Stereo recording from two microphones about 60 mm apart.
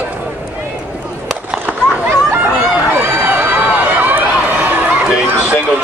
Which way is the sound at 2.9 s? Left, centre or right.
Right.